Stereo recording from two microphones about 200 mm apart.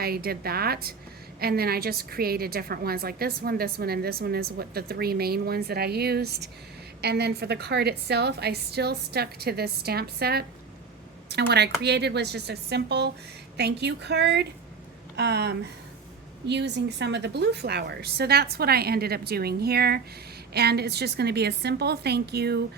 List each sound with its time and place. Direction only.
0.0 s a woman's voice: 50° right (ahead or behind)